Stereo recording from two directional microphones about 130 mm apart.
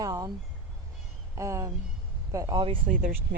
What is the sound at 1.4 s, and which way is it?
Speech, 25° right (ahead or behind).